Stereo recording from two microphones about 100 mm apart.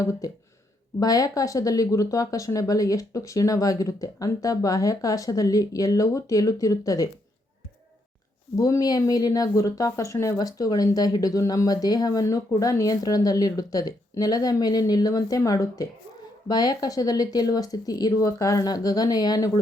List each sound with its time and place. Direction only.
0.0 s speech: 30° left (ahead or behind)
8.5 s speech: 35° left (ahead or behind)